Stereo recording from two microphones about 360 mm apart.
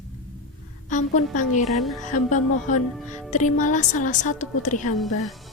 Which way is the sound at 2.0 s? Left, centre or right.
Centre.